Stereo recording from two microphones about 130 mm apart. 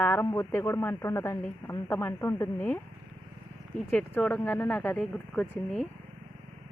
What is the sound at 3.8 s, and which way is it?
Speech, 15° left (ahead or behind).